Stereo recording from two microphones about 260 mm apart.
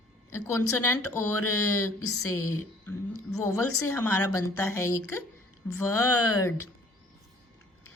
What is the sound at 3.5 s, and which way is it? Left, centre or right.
Speech, left.